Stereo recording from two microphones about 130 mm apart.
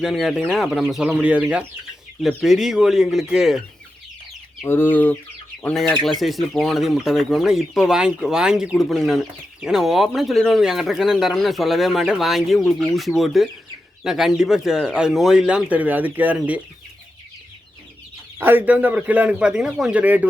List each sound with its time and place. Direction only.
0.0 s speech: centre (ahead or behind)
1.0 s a man's voice: 10° right (ahead or behind)
4.6 s chicken: 15° left (ahead or behind)
5.6 s speech: 5° left (ahead or behind); by 16.6 s 10° right (ahead or behind)
18.3 s a man's voice: 15° right (ahead or behind)